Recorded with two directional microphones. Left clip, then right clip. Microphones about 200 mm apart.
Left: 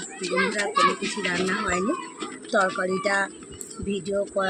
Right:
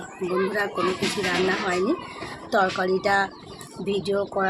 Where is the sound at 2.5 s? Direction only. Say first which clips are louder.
Right 1 dB; 5° right (ahead or behind).